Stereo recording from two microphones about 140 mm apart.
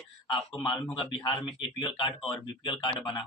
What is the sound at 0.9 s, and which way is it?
Speech, 35° left (ahead or behind).